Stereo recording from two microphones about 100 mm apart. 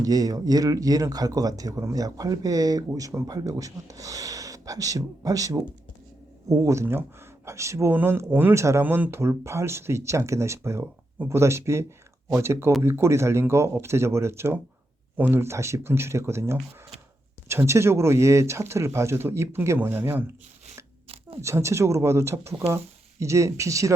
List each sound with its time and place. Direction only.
0.0 s speech: 35° right (ahead or behind); by 20.2 s 20° right (ahead or behind)
21.4 s speech: 30° right (ahead or behind)